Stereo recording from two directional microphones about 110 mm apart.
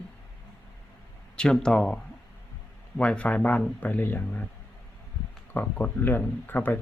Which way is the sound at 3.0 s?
10° left (ahead or behind).